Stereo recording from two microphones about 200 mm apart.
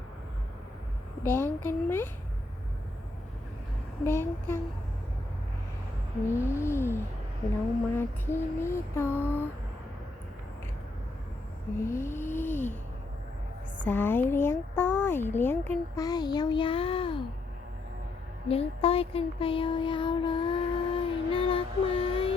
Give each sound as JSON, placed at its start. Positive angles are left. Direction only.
{"t": 1.2, "sound": "a child's voice", "side_deg": 10}
{"t": 4.0, "sound": "a child's voice", "side_deg": 10}
{"t": 6.3, "sound": "a child's voice", "side_deg": 15}
{"t": 11.8, "sound": "a child's voice", "side_deg": 15}
{"t": 13.8, "sound": "a child's voice", "side_deg": 10}
{"t": 18.4, "sound": "child singing", "side_deg": 30}